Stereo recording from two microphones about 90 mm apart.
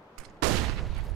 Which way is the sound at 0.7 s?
Centre (ahead or behind).